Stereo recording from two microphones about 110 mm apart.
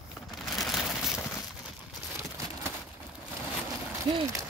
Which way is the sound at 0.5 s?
Centre (ahead or behind).